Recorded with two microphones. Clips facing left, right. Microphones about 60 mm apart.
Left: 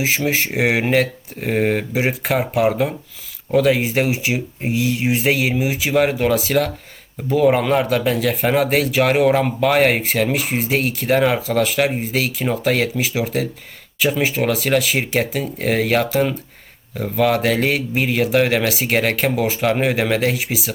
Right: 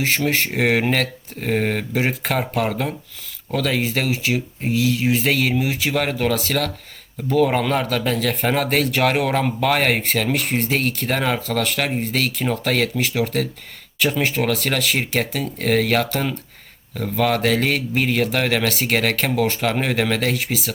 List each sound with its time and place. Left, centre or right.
0.0 s a man's voice: centre